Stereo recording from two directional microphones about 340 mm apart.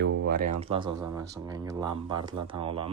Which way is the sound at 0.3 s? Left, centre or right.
Right.